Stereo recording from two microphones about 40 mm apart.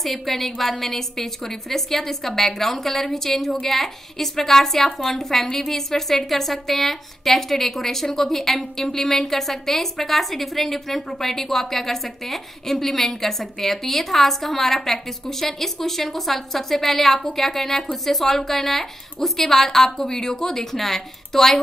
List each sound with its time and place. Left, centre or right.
0.0 s a woman's voice: centre